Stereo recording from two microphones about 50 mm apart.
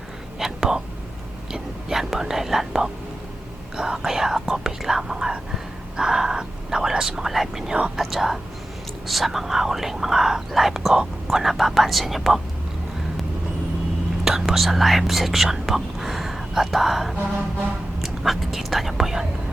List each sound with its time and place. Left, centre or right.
0.3 s whispering: centre
1.5 s speech: centre
7.7 s speech: right
7.9 s speech: centre
14.3 s speech: centre